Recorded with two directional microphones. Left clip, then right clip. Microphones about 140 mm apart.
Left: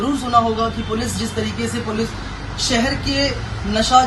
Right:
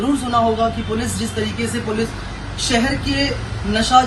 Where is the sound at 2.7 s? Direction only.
20° left (ahead or behind).